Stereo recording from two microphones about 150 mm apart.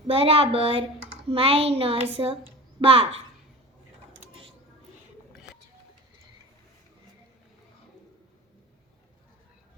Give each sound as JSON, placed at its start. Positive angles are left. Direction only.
{"t": 0.1, "sound": "speech", "side_deg": -40}
{"t": 2.2, "sound": "speech", "side_deg": -30}
{"t": 2.8, "sound": "speech", "side_deg": -40}